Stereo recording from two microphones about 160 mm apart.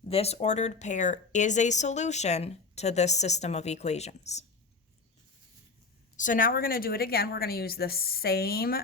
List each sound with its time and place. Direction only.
0.1 s speech: 40° left (ahead or behind)
6.1 s a woman's voice: 55° left (ahead or behind); by 8.8 s 70° left (ahead or behind)